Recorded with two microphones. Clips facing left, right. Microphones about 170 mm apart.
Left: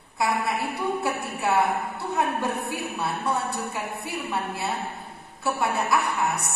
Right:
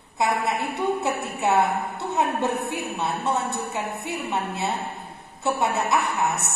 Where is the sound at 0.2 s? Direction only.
20° right (ahead or behind).